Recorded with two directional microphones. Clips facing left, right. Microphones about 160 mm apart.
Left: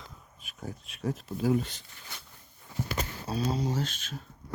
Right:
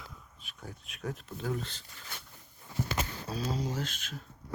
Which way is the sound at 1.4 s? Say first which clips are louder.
Left 9 dB; 10° left (ahead or behind).